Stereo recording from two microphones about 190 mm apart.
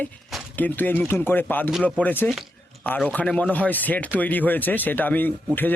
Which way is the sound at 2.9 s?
10° left (ahead or behind).